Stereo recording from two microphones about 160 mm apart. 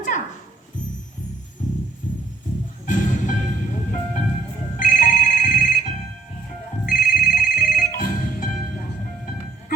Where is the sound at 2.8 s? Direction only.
55° left (ahead or behind).